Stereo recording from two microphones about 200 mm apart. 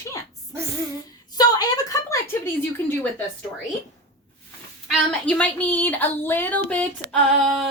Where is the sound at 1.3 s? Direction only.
20° left (ahead or behind).